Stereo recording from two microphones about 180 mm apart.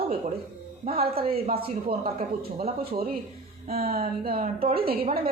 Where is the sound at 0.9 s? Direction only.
55° right (ahead or behind).